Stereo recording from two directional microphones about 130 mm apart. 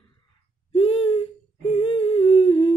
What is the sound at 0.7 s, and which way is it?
Humming, 45° left (ahead or behind).